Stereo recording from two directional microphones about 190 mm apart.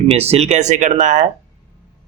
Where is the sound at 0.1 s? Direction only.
35° right (ahead or behind).